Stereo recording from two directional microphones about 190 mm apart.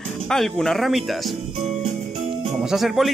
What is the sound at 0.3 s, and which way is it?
Speech, centre (ahead or behind).